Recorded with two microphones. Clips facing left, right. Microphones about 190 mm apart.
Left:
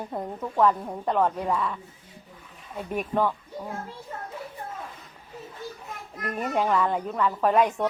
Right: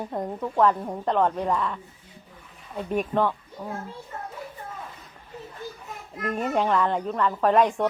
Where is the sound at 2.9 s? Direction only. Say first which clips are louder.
Right 2 dB; 10° left (ahead or behind).